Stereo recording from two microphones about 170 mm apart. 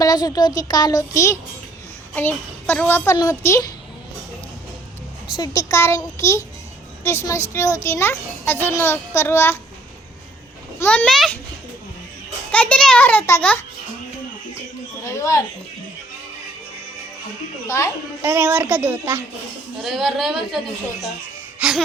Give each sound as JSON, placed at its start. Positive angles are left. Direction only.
{"t": 0.0, "sound": "a woman's voice", "side_deg": 20}
{"t": 5.4, "sound": "a child's voice", "side_deg": 20}
{"t": 7.5, "sound": "a child's voice", "side_deg": 15}
{"t": 10.8, "sound": "a woman's voice", "side_deg": 5}
{"t": 12.5, "sound": "a child's voice", "side_deg": 10}
{"t": 15.0, "sound": "a sound", "side_deg": 20}
{"t": 17.7, "sound": "a child's voice", "side_deg": 15}
{"t": 18.2, "sound": "a woman's voice", "side_deg": -15}
{"t": 19.8, "sound": "a woman's voice", "side_deg": 0}
{"t": 21.6, "sound": "gasp", "side_deg": -10}